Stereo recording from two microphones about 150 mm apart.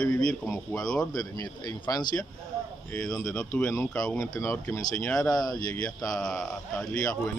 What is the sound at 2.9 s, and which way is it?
Speech, 5° left (ahead or behind).